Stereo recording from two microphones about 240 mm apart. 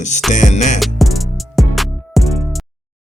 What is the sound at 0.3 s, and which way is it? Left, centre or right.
Speech, left.